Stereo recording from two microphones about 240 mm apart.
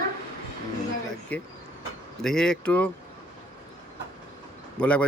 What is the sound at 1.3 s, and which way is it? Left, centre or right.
A man's voice, centre.